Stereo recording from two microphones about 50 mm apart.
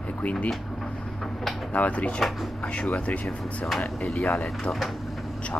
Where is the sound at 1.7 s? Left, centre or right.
Left.